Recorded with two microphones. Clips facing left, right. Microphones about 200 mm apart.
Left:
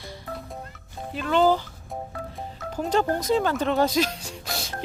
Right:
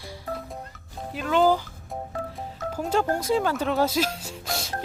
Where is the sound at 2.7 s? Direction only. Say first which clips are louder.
Left 1 dB; 5° right (ahead or behind).